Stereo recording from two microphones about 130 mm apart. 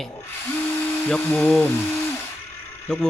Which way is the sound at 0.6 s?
15° left (ahead or behind).